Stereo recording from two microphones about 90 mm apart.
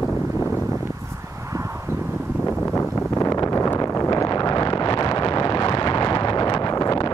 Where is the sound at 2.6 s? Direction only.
15° left (ahead or behind).